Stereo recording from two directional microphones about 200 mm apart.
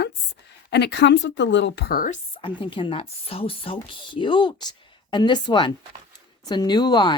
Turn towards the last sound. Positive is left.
turn(degrees=20)  # may be behind; listen again after turning